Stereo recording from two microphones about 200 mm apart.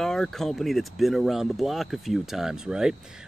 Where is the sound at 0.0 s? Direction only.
Centre (ahead or behind).